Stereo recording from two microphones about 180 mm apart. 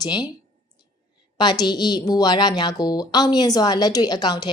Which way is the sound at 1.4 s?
25° left (ahead or behind).